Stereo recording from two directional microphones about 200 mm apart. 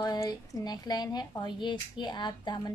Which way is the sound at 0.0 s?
20° left (ahead or behind).